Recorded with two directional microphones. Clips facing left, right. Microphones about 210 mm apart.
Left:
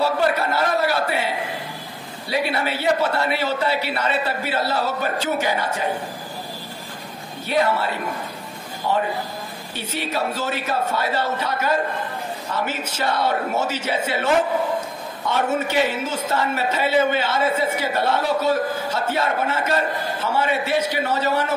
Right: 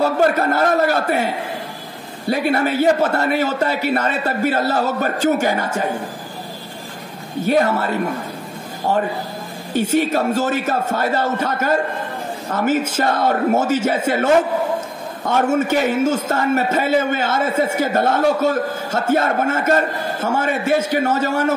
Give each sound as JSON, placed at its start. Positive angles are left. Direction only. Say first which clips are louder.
{"t": 0.0, "sound": "a man's voice", "louder": "right 4 dB", "side_deg": -50}
{"t": 7.4, "sound": "a man's voice", "louder": "right 4 dB", "side_deg": -45}